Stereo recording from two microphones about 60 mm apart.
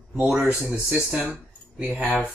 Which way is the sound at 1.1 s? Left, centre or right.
Centre.